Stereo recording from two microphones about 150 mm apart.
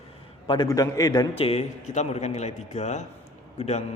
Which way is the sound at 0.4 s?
30° left (ahead or behind).